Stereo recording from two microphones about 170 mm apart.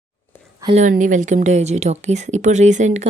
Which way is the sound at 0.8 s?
50° right (ahead or behind).